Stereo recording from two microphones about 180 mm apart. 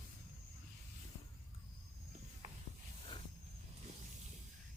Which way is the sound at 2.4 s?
40° right (ahead or behind).